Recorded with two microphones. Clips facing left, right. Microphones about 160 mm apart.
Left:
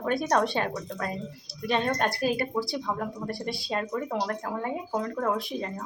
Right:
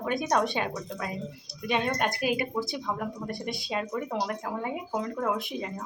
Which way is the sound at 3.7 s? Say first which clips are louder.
Left 1 dB; 10° right (ahead or behind).